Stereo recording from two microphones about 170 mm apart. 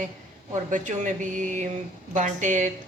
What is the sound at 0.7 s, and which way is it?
Speech, 45° right (ahead or behind).